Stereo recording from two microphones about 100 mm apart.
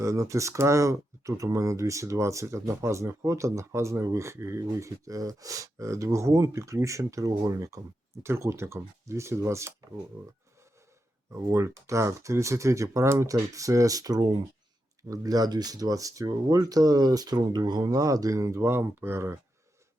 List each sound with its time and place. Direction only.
0.0 s speech: 30° right (ahead or behind)
11.3 s speech: 30° right (ahead or behind)